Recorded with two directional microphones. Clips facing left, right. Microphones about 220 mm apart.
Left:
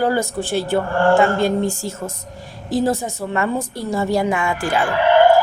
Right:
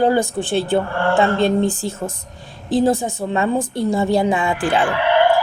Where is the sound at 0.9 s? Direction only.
45° left (ahead or behind).